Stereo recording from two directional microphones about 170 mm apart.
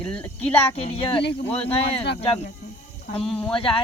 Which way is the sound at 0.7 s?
35° left (ahead or behind).